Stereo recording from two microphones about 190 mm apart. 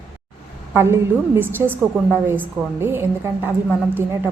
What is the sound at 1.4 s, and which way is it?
A woman's voice, 10° right (ahead or behind).